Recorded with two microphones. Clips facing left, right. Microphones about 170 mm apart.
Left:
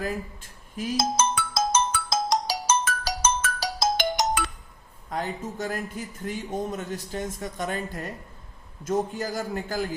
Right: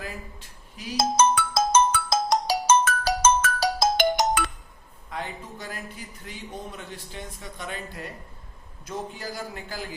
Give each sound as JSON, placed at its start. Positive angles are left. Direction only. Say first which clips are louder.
{"t": 0.9, "sound": "ringtone", "louder": "right 4 dB", "side_deg": -55}
{"t": 5.0, "sound": "a man's voice", "louder": "left 4 dB", "side_deg": 45}